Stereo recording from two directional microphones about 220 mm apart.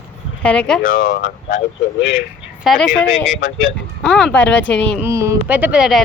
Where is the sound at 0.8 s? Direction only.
40° left (ahead or behind).